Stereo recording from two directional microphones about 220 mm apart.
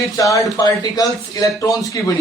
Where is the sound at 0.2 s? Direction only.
15° left (ahead or behind).